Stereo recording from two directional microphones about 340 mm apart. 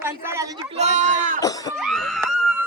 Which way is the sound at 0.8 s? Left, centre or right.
Right.